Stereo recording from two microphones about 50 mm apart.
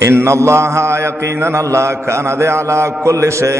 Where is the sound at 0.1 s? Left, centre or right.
Right.